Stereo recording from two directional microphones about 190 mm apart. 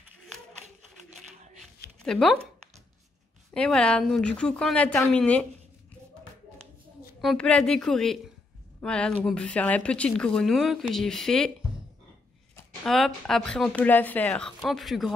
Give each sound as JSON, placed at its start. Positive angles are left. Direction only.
{"t": 2.0, "sound": "speech", "side_deg": 5}
{"t": 7.2, "sound": "speech", "side_deg": 5}
{"t": 12.8, "sound": "speech", "side_deg": 0}